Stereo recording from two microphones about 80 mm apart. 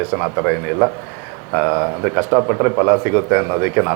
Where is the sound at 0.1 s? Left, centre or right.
Right.